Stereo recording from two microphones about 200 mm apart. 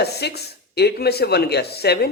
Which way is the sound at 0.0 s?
55° left (ahead or behind).